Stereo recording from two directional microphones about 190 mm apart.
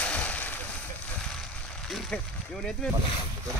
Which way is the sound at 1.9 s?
Centre (ahead or behind).